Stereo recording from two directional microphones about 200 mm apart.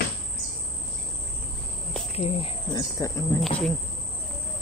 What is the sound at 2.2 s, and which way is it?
Speech, 25° left (ahead or behind).